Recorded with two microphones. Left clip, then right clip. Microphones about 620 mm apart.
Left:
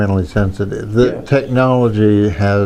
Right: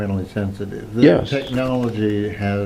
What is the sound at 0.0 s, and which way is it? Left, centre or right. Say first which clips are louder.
Speech: left 8 dB; left.